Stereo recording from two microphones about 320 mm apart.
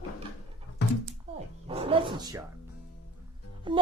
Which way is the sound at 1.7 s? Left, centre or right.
Centre.